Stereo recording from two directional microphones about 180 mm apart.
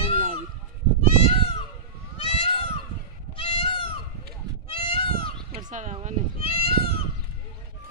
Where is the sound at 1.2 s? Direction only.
35° left (ahead or behind).